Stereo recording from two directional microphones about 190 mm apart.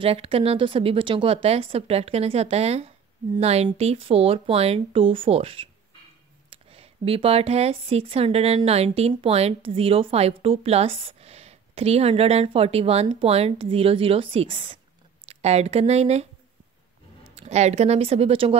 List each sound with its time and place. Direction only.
0.0 s speech: 30° right (ahead or behind)
17.4 s speech: 35° right (ahead or behind)